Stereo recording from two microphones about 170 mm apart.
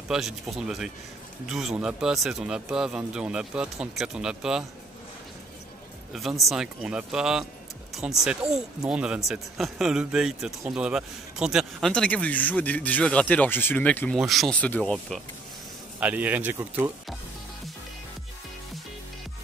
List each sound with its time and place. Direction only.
0.1 s a man's voice: centre (ahead or behind)
6.1 s a man's voice: centre (ahead or behind)
16.0 s speech: 10° right (ahead or behind)